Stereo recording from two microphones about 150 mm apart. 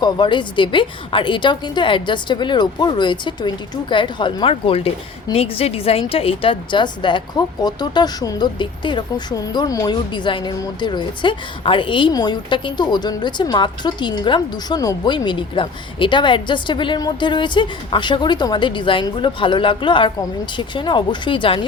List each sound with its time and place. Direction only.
0.0 s a woman's voice: 30° left (ahead or behind)